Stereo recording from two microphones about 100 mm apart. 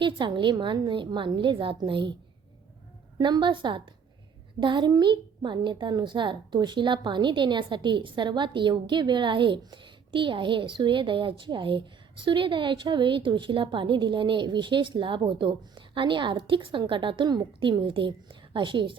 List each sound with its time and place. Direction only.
0.0 s a woman's voice: 50° right (ahead or behind)
3.2 s a woman's voice: 50° right (ahead or behind)